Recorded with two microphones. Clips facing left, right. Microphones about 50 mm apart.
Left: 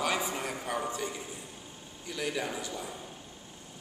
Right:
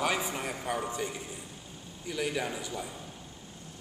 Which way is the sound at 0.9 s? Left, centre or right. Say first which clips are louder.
Right 1 dB; centre.